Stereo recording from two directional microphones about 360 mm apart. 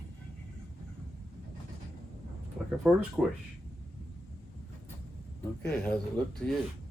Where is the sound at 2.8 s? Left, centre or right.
Centre.